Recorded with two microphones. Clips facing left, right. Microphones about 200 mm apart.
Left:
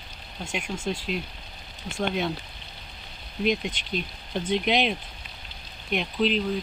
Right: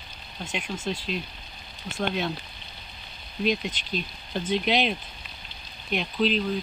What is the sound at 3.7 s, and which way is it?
Speech, 15° left (ahead or behind).